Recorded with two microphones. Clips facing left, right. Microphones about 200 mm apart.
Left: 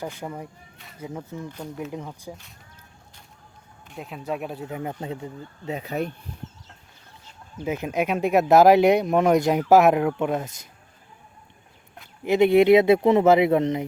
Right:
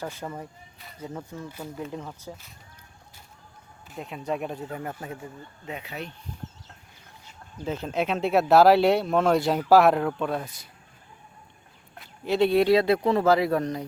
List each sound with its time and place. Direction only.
0.0 s speech: 15° left (ahead or behind)
1.5 s speech: 5° right (ahead or behind)
1.9 s speech: 10° left (ahead or behind)
3.8 s speech: centre (ahead or behind)
4.7 s speech: 15° left (ahead or behind)
5.6 s speech: 40° left (ahead or behind)
7.6 s speech: 15° left (ahead or behind)
12.2 s speech: 20° left (ahead or behind)